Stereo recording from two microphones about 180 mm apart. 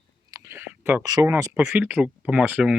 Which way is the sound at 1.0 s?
20° right (ahead or behind).